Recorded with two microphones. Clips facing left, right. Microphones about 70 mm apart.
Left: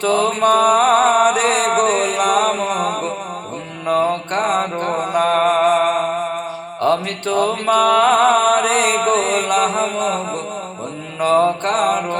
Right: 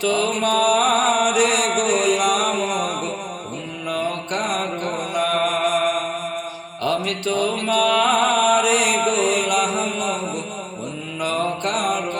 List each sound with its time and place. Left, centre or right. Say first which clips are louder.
0.0 s mantra: left 5 dB; left
11.2 s mantra: left 8 dB; left